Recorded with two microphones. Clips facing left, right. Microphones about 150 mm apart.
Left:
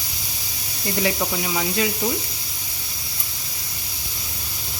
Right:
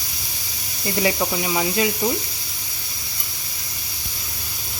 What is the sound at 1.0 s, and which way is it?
Speech, 5° right (ahead or behind).